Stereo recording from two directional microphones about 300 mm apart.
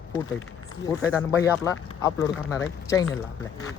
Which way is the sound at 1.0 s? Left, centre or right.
Centre.